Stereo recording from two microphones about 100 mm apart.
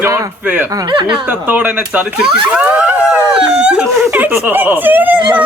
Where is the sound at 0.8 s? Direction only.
50° right (ahead or behind).